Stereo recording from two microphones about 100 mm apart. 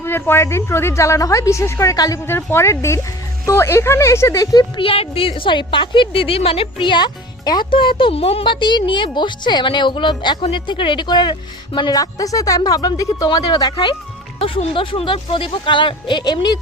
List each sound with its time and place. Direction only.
0.0 s speech: 25° left (ahead or behind)
2.2 s speech: 25° left (ahead or behind)
4.8 s a woman's voice: 70° left (ahead or behind); by 7.7 s 45° left (ahead or behind)
7.7 s a woman's voice: 60° left (ahead or behind); by 8.5 s 75° left (ahead or behind)
8.5 s a woman's voice: 50° left (ahead or behind)
11.9 s speech: 35° left (ahead or behind)
14.3 s a woman's voice: 65° left (ahead or behind); by 16.6 s 45° left (ahead or behind)